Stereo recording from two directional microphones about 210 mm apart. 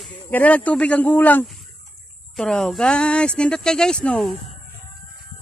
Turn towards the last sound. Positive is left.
turn(degrees=5)  # may be behind; listen again after turning